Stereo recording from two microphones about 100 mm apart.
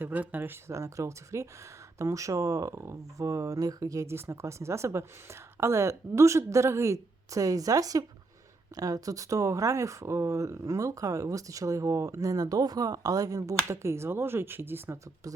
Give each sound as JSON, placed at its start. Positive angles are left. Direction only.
{"t": 0.0, "sound": "speech", "side_deg": -15}
{"t": 0.7, "sound": "speech", "side_deg": -30}